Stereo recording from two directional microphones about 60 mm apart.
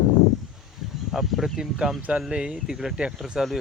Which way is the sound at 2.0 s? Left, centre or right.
Right.